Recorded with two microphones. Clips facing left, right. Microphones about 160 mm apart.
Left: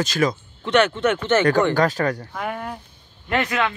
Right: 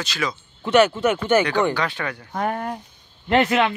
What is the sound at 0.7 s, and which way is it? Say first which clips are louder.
Speech: right 1 dB; 5° right (ahead or behind).